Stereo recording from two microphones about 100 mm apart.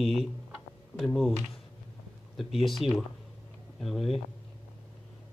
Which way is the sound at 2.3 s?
Centre (ahead or behind).